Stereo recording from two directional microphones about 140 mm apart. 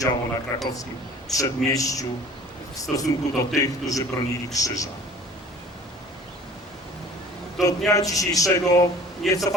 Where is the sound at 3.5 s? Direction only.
25° left (ahead or behind).